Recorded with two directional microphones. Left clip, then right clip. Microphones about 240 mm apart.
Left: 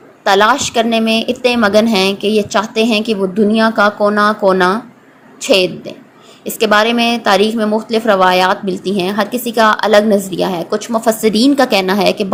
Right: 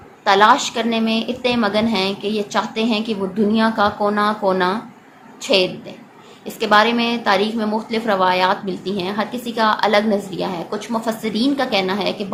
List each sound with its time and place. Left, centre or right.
0.3 s a woman's voice: left